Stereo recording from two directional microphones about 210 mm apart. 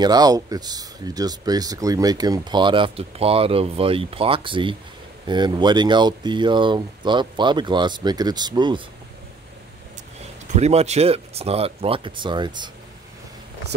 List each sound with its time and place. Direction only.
0.0 s speech: 20° right (ahead or behind)
10.5 s speech: 30° right (ahead or behind)